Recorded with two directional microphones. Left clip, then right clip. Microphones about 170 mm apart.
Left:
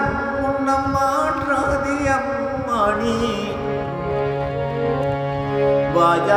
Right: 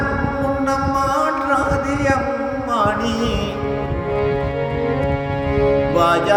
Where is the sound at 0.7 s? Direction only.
25° right (ahead or behind).